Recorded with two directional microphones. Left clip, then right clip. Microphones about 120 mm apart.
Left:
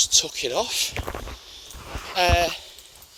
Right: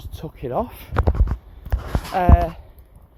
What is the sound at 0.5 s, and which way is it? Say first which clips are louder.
Speech: right 2 dB; 15° left (ahead or behind).